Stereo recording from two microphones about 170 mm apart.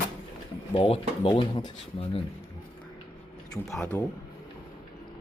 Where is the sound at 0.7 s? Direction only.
35° left (ahead or behind).